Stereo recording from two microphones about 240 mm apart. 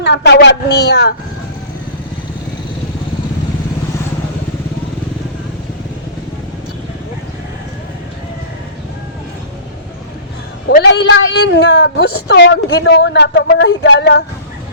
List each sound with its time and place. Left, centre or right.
0.0 s a woman's voice: left
10.7 s a woman's voice: left